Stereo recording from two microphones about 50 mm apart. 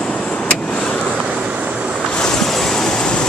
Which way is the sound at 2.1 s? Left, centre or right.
Centre.